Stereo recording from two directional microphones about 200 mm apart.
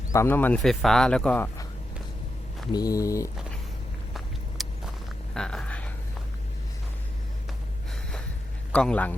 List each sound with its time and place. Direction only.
0.1 s speech: 10° left (ahead or behind)
2.7 s speech: 15° left (ahead or behind)
4.6 s walk: centre (ahead or behind)
5.3 s a sound: 5° left (ahead or behind)
8.7 s a man's voice: 5° left (ahead or behind)